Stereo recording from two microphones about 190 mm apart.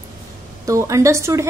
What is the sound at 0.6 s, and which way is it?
Speech, 15° right (ahead or behind).